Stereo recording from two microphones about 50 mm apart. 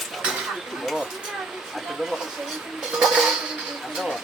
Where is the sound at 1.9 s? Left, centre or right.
Centre.